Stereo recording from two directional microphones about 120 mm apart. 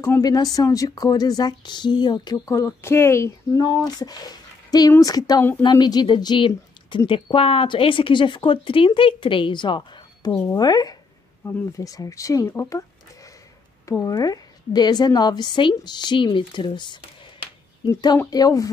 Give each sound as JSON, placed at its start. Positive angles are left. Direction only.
{"t": 0.0, "sound": "a woman's voice", "side_deg": 30}